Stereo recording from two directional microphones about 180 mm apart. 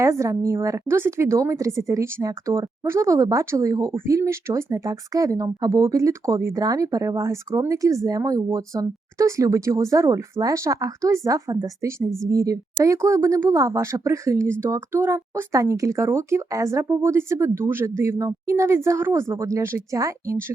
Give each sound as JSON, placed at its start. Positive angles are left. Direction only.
{"t": 0.0, "sound": "a woman's voice", "side_deg": -15}